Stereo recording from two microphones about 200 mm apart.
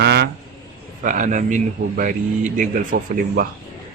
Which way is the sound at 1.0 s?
40° right (ahead or behind).